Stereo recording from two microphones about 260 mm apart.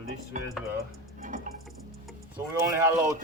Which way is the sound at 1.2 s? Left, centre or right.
Right.